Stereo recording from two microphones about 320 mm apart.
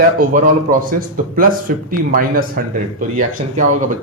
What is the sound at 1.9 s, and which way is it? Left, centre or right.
Speech, right.